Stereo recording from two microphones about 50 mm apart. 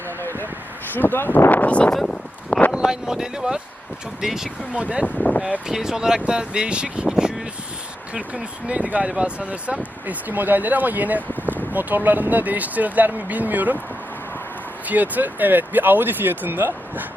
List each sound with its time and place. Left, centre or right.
0.2 s a sound: left
0.9 s speech: left
1.5 s speech: left
1.9 s speech: centre
2.5 s a sound: left
2.8 s speech: centre
4.7 s speech: right
5.6 s speech: centre
10.1 s speech: right
14.8 s speech: right